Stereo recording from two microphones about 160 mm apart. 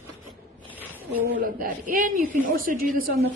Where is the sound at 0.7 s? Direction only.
10° left (ahead or behind).